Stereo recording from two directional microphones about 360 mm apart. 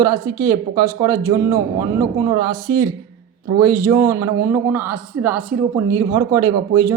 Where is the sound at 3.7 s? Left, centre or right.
Centre.